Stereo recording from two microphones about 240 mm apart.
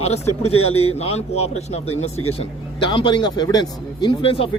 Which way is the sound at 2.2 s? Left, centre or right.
Left.